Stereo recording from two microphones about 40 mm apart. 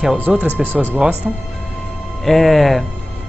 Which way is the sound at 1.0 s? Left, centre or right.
Right.